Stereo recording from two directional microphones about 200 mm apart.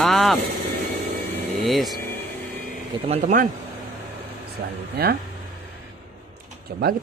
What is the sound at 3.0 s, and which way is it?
Speech, 35° right (ahead or behind).